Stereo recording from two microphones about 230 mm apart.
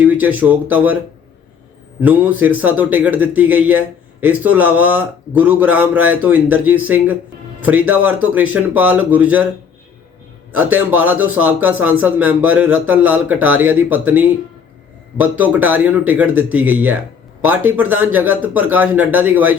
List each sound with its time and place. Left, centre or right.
0.0 s speech: centre
2.0 s a man's voice: centre
10.5 s a man's voice: centre